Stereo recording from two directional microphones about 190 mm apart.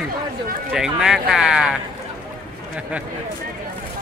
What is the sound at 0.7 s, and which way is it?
Speech, 5° right (ahead or behind).